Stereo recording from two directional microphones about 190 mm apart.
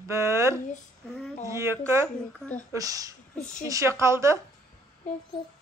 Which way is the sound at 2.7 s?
20° right (ahead or behind).